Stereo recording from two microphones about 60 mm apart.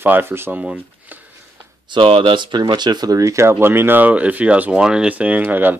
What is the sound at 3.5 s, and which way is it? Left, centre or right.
Speech, right.